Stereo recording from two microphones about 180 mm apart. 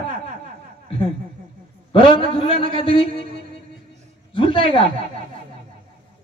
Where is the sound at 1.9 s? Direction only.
30° left (ahead or behind).